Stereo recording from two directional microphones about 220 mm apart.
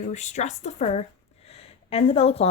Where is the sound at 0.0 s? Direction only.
30° left (ahead or behind).